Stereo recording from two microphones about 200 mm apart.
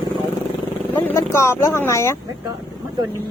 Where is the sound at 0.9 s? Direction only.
15° left (ahead or behind).